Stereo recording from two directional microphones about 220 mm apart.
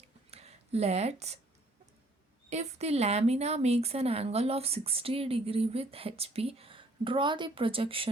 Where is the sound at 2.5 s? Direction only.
30° right (ahead or behind).